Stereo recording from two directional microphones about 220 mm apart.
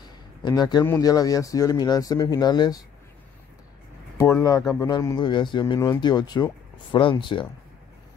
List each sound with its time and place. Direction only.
0.4 s speech: 20° left (ahead or behind)
4.2 s speech: 15° left (ahead or behind)